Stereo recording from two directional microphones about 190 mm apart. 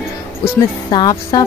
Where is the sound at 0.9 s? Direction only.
20° left (ahead or behind).